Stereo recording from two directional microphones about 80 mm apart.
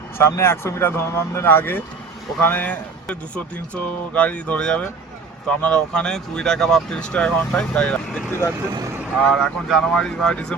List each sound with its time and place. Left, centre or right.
0.2 s speech: left; by 8.2 s centre
8.3 s speech: left
9.3 s speech: centre